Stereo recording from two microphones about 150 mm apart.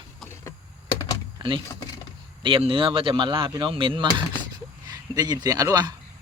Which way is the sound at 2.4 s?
35° right (ahead or behind).